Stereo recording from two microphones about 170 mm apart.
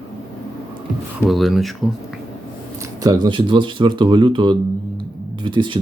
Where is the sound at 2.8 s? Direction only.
20° right (ahead or behind).